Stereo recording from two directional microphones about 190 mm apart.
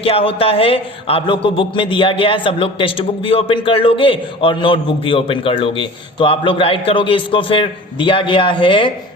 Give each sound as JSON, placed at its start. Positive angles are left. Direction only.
{"t": 0.0, "sound": "a man's voice", "side_deg": 30}